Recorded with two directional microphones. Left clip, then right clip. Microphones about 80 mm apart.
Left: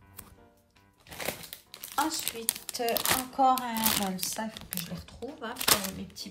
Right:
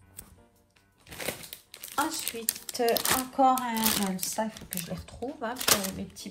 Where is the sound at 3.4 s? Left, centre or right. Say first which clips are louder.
Even; left.